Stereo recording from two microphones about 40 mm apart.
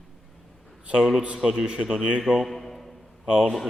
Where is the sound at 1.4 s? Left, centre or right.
Centre.